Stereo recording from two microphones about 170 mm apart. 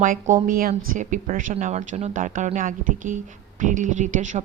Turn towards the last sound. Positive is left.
turn(degrees=-45)  # may be behind; listen again after turning